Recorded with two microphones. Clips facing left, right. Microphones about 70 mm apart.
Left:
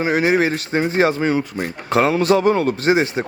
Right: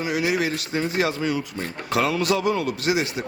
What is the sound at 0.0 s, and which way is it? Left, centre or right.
Speech, left.